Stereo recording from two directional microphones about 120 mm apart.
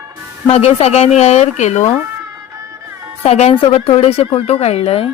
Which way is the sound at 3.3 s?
65° left (ahead or behind).